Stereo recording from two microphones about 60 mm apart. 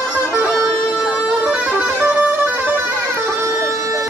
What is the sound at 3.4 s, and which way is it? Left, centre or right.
Music, right.